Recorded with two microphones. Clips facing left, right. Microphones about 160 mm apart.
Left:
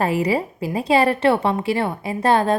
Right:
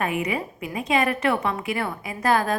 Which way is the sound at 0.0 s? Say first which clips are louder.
Left 6 dB; 30° left (ahead or behind).